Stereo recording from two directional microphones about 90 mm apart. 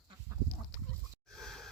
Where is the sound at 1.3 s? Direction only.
5° left (ahead or behind).